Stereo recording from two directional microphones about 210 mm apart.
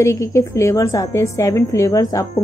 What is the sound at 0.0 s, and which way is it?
A woman's voice, 15° left (ahead or behind).